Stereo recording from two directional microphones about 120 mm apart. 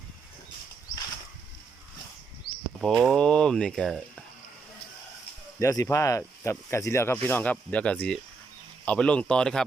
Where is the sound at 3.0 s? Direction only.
5° left (ahead or behind).